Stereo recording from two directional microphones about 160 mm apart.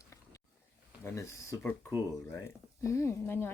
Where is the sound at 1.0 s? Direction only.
20° left (ahead or behind).